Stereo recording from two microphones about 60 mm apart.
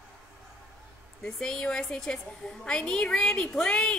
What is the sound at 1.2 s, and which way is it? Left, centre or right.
A woman's voice, centre.